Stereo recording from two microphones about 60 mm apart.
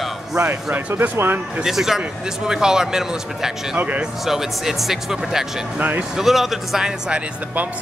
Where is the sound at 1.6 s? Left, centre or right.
Centre.